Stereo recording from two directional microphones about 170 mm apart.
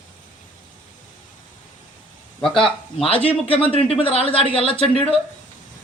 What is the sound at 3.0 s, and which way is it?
Speech, 35° left (ahead or behind).